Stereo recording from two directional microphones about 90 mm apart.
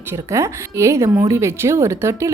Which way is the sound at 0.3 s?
35° right (ahead or behind).